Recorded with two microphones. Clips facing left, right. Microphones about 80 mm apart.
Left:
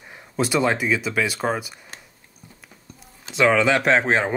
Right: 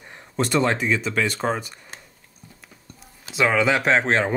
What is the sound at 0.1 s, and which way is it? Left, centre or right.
Speech, centre.